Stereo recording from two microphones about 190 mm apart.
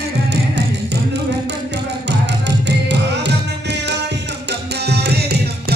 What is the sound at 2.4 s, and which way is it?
Music, 65° right (ahead or behind).